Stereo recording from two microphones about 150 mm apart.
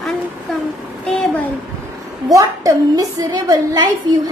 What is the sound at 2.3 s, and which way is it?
A woman's voice, 20° right (ahead or behind).